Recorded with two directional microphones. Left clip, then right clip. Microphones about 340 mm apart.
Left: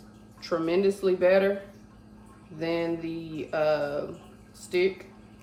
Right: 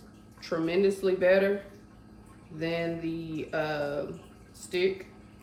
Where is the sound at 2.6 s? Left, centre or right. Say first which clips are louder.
Left 2 dB; centre.